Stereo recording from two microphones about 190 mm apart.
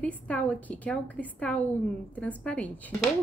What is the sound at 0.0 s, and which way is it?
A woman's voice, 10° left (ahead or behind).